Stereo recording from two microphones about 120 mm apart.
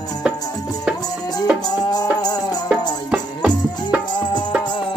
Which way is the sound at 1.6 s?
35° left (ahead or behind).